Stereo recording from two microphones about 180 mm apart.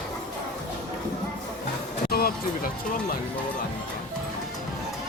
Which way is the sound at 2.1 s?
55° left (ahead or behind).